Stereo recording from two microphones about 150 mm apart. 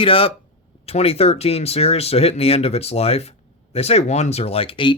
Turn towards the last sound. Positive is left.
turn(degrees=35)  # may be behind; listen again after turning